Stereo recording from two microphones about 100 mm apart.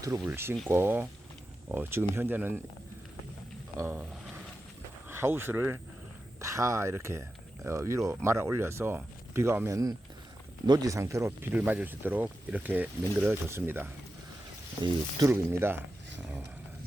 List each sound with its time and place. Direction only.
0.3 s speech: 25° right (ahead or behind)
3.8 s speech: 20° right (ahead or behind)
14.8 s speech: 50° right (ahead or behind)
15.3 s speech: 25° right (ahead or behind)